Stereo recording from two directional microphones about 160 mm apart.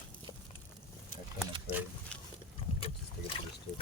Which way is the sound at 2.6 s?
40° left (ahead or behind).